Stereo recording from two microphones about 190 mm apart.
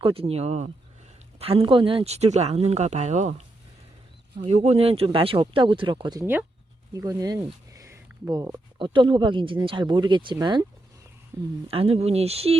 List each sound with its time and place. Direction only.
0.0 s speech: 30° right (ahead or behind)
11.7 s speech: 30° right (ahead or behind)